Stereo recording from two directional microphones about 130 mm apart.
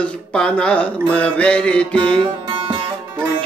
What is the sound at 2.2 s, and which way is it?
Music, 35° right (ahead or behind).